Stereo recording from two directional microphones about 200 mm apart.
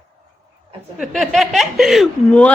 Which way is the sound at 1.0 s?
Centre (ahead or behind).